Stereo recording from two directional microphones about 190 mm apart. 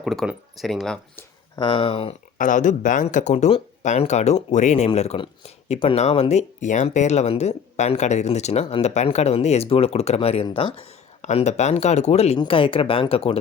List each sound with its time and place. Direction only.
0.0 s speech: centre (ahead or behind)
1.1 s speech: 25° left (ahead or behind)
2.4 s speech: 40° left (ahead or behind)